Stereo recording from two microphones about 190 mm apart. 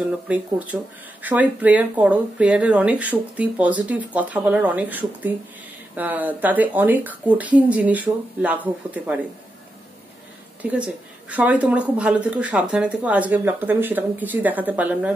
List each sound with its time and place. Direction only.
0.3 s speech: 10° right (ahead or behind)
10.6 s speech: 5° right (ahead or behind)